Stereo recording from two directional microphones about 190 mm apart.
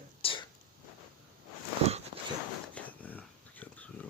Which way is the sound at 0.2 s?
30° left (ahead or behind).